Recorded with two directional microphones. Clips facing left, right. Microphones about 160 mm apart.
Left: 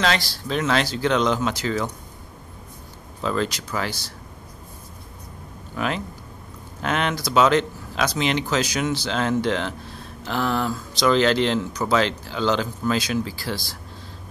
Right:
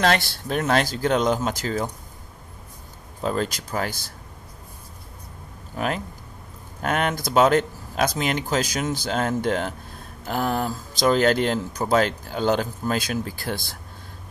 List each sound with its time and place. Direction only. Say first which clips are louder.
0.0 s speech: right 2 dB; 50° right (ahead or behind)
3.2 s speech: left 1 dB; 45° right (ahead or behind)
5.8 s speech: even; 45° right (ahead or behind)